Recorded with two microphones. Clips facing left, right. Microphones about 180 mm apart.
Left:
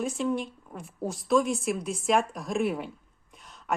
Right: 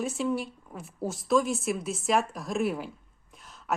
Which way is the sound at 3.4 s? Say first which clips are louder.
Even; centre (ahead or behind).